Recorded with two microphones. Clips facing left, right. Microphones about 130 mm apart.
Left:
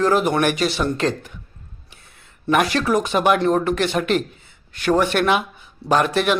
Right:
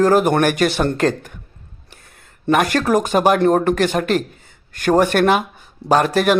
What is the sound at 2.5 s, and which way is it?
Speech, 45° right (ahead or behind).